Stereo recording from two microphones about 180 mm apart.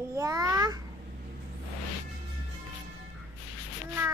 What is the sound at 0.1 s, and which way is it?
Babbling, 20° right (ahead or behind).